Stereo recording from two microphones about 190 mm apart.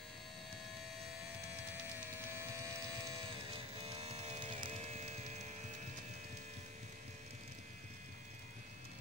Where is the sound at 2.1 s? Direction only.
15° right (ahead or behind); by 5.5 s 40° right (ahead or behind).